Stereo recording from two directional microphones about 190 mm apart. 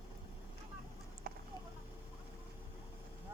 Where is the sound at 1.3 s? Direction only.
55° right (ahead or behind).